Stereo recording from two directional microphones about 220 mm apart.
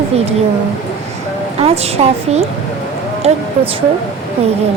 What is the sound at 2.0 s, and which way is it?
Speech, 30° right (ahead or behind).